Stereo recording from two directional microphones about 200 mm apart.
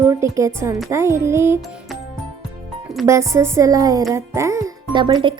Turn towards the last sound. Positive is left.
turn(degrees=-20)  # may be behind; listen again after turning